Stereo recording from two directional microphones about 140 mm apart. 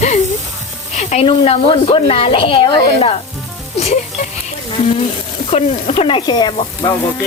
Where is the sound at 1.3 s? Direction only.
40° left (ahead or behind).